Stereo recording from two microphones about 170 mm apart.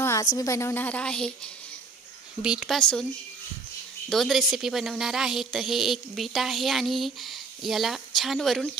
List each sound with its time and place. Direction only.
0.0 s a sound: 15° left (ahead or behind)
0.4 s speech: 15° left (ahead or behind)
4.1 s speech: centre (ahead or behind)